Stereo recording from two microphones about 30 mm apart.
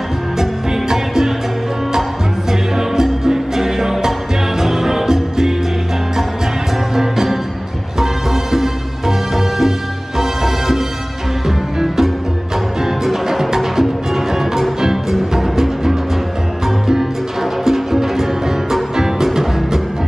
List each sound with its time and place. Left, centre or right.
0.4 s music: centre
2.8 s music: centre
7.0 s music: centre